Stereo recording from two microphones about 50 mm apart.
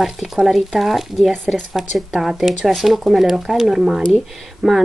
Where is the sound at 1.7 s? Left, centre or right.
Centre.